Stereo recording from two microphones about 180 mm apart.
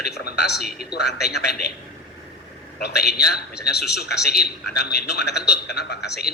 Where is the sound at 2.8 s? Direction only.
65° left (ahead or behind).